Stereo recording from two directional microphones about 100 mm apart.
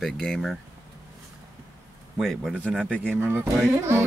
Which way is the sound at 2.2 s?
5° left (ahead or behind).